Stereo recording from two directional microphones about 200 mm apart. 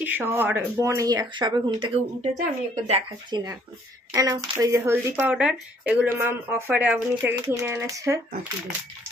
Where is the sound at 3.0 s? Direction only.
20° right (ahead or behind).